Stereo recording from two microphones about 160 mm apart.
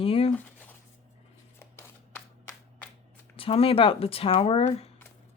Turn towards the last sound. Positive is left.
turn(degrees=35)  # may be behind; listen again after turning